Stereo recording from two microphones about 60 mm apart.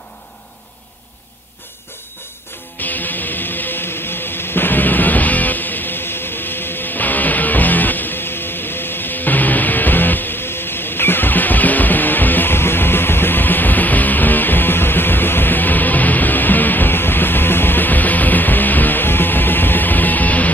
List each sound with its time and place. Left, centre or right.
2.8 s music: left